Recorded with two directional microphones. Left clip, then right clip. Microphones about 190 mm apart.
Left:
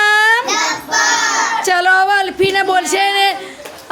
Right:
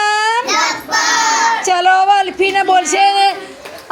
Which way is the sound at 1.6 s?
10° left (ahead or behind).